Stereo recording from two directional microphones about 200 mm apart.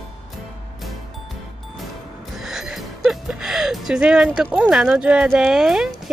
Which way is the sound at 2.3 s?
Centre (ahead or behind).